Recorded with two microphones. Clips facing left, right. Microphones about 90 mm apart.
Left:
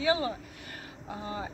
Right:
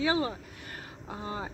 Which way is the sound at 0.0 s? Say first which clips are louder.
Even; 40° right (ahead or behind).